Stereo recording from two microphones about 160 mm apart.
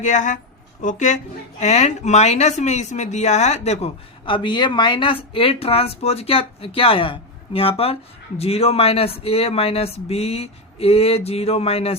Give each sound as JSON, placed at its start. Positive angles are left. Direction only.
{"t": 0.0, "sound": "a woman's voice", "side_deg": 50}